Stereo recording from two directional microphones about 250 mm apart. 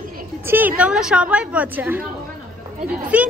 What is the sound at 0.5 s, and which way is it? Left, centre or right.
A woman's voice, centre.